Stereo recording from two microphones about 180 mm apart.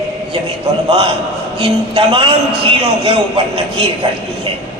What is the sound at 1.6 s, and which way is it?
Speech, 30° right (ahead or behind).